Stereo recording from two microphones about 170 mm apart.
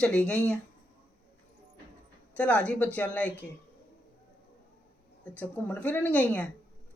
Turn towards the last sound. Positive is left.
turn(degrees=10)  # may be behind; listen again after turning